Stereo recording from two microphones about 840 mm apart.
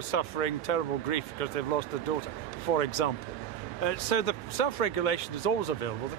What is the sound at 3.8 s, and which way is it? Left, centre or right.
Speech, left.